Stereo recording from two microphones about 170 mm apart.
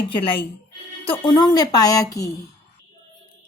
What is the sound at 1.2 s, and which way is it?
Speech, 25° left (ahead or behind).